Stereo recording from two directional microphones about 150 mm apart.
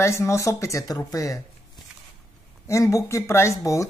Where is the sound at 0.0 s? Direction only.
20° left (ahead or behind).